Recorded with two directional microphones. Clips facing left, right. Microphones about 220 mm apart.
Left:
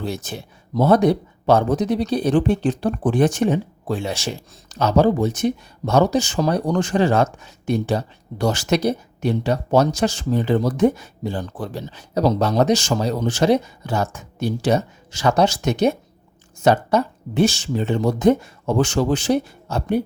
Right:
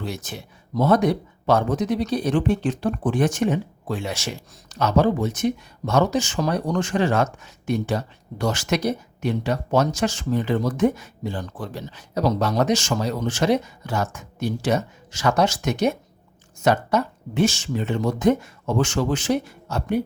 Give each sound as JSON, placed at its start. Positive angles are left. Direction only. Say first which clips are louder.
{"t": 0.0, "sound": "speech", "louder": "left 4 dB", "side_deg": 30}